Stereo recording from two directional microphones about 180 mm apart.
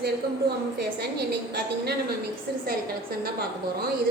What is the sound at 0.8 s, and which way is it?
A woman's voice, 65° right (ahead or behind).